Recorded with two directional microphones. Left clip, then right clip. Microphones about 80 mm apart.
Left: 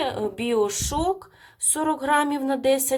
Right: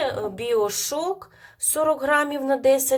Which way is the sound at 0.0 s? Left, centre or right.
Left.